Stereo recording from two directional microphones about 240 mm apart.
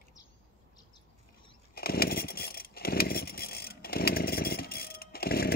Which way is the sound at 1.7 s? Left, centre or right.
Left.